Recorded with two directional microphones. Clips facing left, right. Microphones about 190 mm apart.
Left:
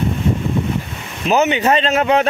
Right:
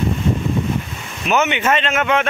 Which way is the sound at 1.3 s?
35° left (ahead or behind).